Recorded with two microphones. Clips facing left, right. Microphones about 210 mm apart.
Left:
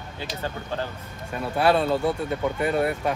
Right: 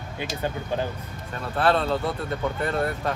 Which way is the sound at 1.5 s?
10° left (ahead or behind).